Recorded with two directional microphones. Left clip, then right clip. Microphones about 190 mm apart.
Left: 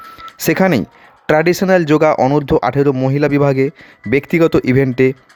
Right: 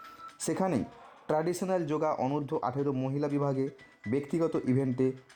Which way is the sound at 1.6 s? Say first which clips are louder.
Left 18 dB; 45° left (ahead or behind).